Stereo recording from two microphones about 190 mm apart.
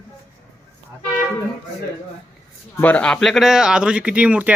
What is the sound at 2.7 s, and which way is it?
Speech, 10° left (ahead or behind).